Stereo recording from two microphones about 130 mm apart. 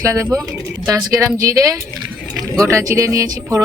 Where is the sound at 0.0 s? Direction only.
25° right (ahead or behind).